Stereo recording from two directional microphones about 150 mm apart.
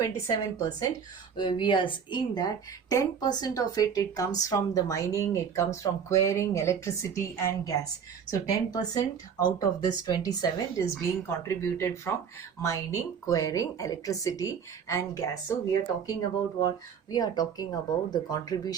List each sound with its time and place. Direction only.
0.3 s speech: 25° left (ahead or behind)
16.6 s speech: 25° left (ahead or behind)